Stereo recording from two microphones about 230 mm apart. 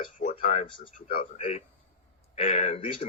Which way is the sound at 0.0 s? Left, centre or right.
Left.